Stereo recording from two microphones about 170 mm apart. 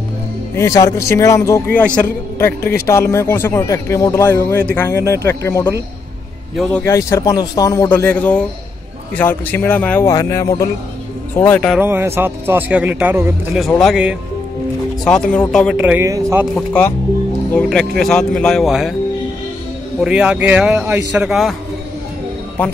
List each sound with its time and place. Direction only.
0.6 s speech: 20° left (ahead or behind)
6.5 s a man's voice: centre (ahead or behind)
6.8 s speech: 15° left (ahead or behind)
11.7 s a man's voice: 15° right (ahead or behind); by 15.4 s 5° left (ahead or behind)
15.7 s a man's voice: 10° right (ahead or behind)
16.5 s a man's voice: 10° left (ahead or behind)
20.0 s a man's voice: 5° right (ahead or behind)